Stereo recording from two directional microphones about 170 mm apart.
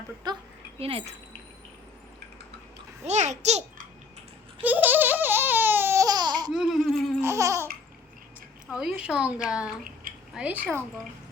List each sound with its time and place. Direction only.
0.2 s speech: 25° right (ahead or behind)
0.8 s speech: 35° right (ahead or behind)
3.0 s a child's voice: 40° right (ahead or behind)
4.6 s a sound: 10° right (ahead or behind)
6.5 s laughter: centre (ahead or behind)
7.2 s laughter: 15° right (ahead or behind)
8.7 s a woman's voice: 5° right (ahead or behind)